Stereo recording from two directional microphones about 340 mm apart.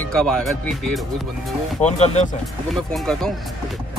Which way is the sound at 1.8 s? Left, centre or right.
Centre.